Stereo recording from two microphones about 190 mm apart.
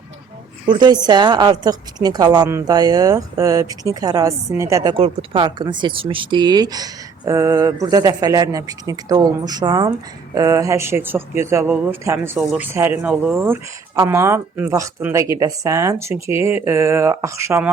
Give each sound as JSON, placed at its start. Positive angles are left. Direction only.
{"t": 0.7, "sound": "a woman's voice", "side_deg": -20}
{"t": 12.4, "sound": "speech", "side_deg": 0}